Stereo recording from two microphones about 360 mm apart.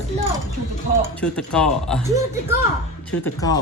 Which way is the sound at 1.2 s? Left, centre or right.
Centre.